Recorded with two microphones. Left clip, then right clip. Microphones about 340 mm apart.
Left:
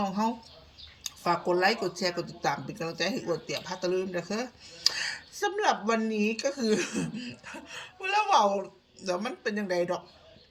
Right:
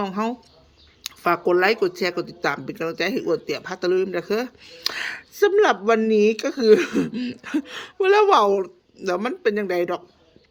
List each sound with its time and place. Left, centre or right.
0.0 s a woman's voice: centre
1.6 s a woman's voice: centre